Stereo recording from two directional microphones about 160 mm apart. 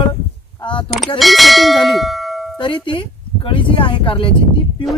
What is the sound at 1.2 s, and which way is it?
Bell, centre (ahead or behind).